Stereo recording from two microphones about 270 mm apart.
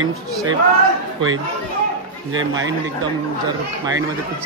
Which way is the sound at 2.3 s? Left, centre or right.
Right.